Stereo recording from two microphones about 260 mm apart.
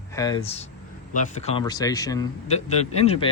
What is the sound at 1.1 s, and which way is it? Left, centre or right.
Speech, left.